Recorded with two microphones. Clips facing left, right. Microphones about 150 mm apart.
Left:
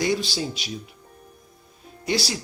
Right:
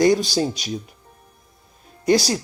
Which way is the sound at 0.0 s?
45° right (ahead or behind).